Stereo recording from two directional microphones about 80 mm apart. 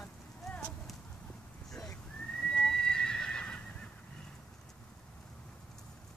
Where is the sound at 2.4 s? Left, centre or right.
Centre.